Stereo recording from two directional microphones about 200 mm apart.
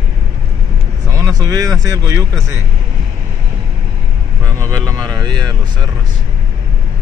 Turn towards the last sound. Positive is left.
turn(degrees=-20)  # may be behind; listen again after turning